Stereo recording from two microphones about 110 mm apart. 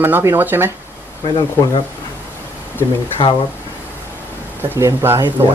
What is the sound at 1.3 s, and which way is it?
Speech, 35° left (ahead or behind).